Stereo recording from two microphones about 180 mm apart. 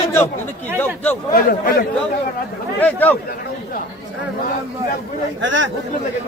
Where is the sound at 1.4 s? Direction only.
55° left (ahead or behind).